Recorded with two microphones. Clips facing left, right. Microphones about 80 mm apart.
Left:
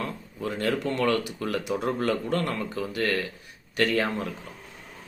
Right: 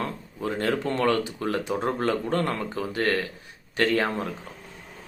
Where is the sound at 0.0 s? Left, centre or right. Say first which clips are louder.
Right 2 dB; right.